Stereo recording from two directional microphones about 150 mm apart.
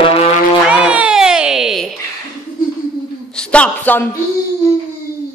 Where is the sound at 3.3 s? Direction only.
10° left (ahead or behind).